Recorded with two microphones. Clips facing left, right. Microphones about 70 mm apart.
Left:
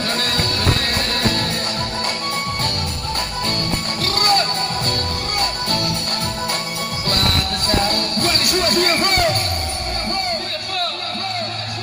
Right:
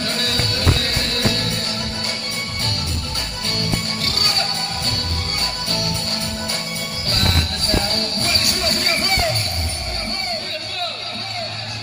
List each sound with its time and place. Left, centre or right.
0.0 s music: left
4.0 s music: left
7.7 s music: left